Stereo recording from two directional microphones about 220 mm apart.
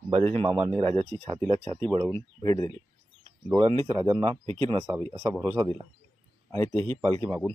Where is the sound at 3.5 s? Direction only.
25° right (ahead or behind).